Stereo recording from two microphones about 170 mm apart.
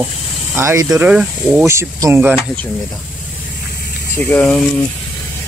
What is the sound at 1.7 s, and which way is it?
Speech, 15° right (ahead or behind).